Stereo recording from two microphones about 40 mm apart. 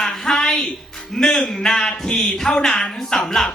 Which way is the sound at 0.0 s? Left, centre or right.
Centre.